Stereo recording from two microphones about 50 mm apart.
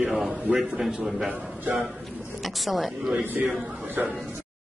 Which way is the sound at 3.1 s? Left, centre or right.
Right.